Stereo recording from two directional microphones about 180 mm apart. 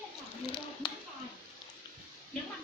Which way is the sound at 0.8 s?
25° left (ahead or behind).